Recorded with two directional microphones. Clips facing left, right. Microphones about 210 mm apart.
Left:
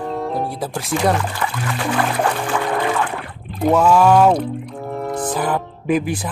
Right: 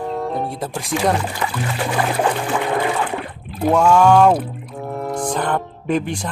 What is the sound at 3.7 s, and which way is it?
Speech, 5° left (ahead or behind).